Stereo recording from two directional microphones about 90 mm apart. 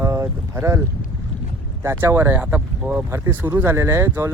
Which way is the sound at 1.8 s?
30° right (ahead or behind).